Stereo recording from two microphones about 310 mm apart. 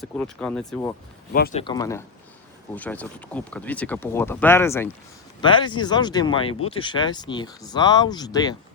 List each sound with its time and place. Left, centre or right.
0.0 s speech: centre
1.3 s speech: left
1.6 s speech: centre